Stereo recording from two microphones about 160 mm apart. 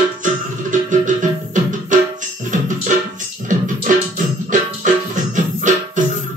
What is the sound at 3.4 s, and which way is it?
Music, 50° right (ahead or behind).